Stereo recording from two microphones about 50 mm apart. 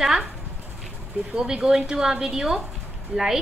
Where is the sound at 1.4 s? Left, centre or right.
Centre.